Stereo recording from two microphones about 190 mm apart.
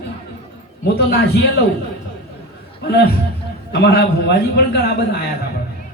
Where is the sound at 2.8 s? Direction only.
60° left (ahead or behind).